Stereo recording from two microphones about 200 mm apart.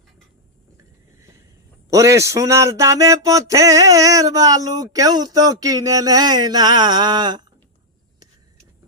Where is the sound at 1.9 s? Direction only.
15° right (ahead or behind).